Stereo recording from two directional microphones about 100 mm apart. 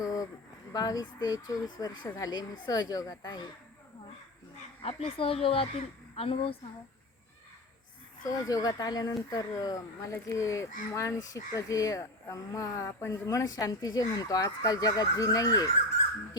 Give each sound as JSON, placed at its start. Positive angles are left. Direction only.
{"t": 0.0, "sound": "a sound", "side_deg": 35}
{"t": 0.7, "sound": "speech", "side_deg": 40}
{"t": 4.8, "sound": "speech", "side_deg": 85}
{"t": 8.3, "sound": "speech", "side_deg": 35}